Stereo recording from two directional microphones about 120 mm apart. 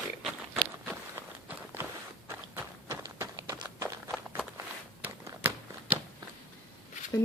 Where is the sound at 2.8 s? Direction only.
25° right (ahead or behind).